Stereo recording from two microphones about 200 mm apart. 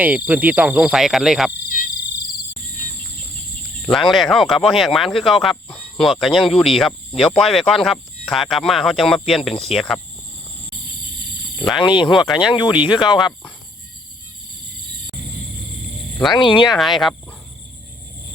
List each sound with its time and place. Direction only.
0.3 s speech: 10° right (ahead or behind)
1.7 s cricket: 40° left (ahead or behind)
3.8 s speech: centre (ahead or behind)
11.8 s speech: 25° left (ahead or behind)
16.3 s speech: 25° left (ahead or behind)
16.7 s speech: centre (ahead or behind)